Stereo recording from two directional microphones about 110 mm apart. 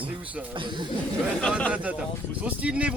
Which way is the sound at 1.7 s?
15° right (ahead or behind).